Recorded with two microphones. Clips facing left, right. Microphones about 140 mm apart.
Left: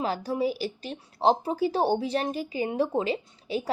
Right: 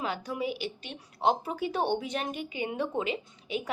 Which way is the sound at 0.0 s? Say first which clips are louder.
Left 5 dB; 35° left (ahead or behind).